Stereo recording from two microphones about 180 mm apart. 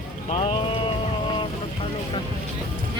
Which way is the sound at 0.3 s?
35° left (ahead or behind).